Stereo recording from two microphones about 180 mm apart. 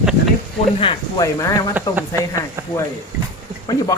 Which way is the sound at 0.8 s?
30° left (ahead or behind).